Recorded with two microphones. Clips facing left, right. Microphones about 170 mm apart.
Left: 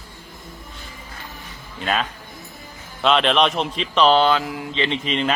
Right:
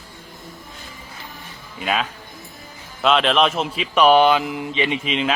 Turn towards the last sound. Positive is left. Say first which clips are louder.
# even
turn(degrees=-5)  # may be behind; listen again after turning